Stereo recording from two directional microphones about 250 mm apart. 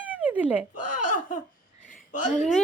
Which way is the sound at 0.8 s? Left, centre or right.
Left.